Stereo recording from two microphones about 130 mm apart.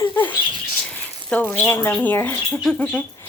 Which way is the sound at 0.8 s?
10° left (ahead or behind).